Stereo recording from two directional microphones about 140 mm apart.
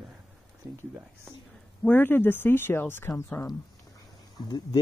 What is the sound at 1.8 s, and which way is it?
Speech, 15° left (ahead or behind).